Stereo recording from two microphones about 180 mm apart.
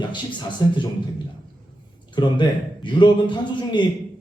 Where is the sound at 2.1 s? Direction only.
25° left (ahead or behind).